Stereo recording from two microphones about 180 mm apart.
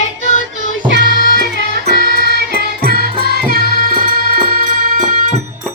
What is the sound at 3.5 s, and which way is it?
Music, 60° left (ahead or behind).